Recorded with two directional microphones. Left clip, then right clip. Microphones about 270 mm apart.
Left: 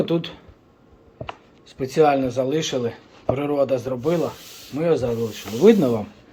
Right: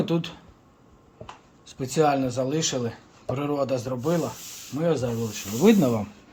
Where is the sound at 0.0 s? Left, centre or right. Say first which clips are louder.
Left 4 dB; right.